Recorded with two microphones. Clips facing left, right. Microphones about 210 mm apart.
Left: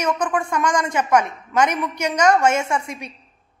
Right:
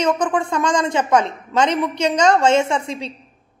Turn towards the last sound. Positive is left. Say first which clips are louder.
# right 3 dB
turn(degrees=-25)  # may be behind; listen again after turning